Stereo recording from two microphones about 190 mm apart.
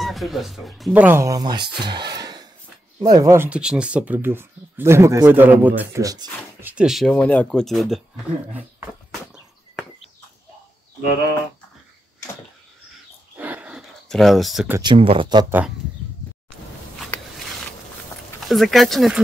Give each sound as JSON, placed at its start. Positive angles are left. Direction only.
{"t": 0.0, "sound": "speech", "side_deg": 0}
{"t": 6.7, "sound": "speech", "side_deg": -5}
{"t": 13.4, "sound": "a sound", "side_deg": -10}
{"t": 14.8, "sound": "speech", "side_deg": -25}
{"t": 18.5, "sound": "speech", "side_deg": 0}